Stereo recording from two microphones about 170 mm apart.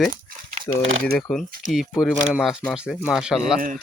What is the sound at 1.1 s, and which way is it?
Speech, centre (ahead or behind).